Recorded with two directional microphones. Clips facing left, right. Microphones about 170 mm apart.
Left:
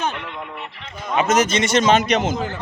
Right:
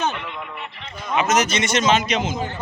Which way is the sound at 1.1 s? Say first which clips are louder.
Left 2 dB; 30° left (ahead or behind).